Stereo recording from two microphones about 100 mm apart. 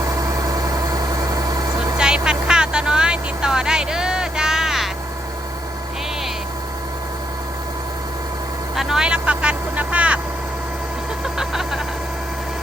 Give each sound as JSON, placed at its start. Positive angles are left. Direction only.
{"t": 0.0, "sound": "vehicle", "side_deg": -35}
{"t": 2.0, "sound": "vehicle", "side_deg": -10}
{"t": 8.7, "sound": "vehicle", "side_deg": -5}
{"t": 11.3, "sound": "music", "side_deg": -5}